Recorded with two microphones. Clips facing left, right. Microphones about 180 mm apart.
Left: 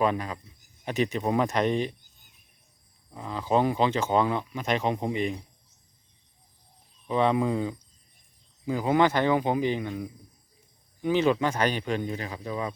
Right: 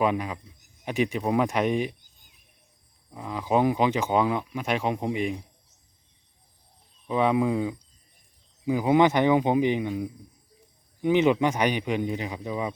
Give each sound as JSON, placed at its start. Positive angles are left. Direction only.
{"t": 0.0, "sound": "speech", "side_deg": -10}
{"t": 3.1, "sound": "speech", "side_deg": -5}
{"t": 7.1, "sound": "speech", "side_deg": -5}
{"t": 11.0, "sound": "speech", "side_deg": -20}